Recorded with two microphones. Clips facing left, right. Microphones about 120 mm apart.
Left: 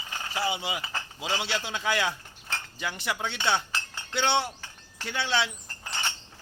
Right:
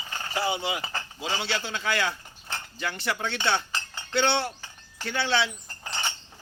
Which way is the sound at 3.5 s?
5° left (ahead or behind).